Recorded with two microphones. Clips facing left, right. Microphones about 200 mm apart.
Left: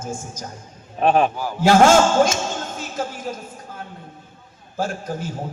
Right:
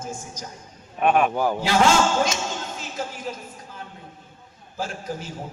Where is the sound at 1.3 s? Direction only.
55° right (ahead or behind).